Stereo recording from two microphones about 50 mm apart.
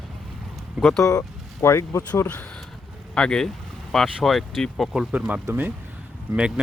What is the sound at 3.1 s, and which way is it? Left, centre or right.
Speech, centre.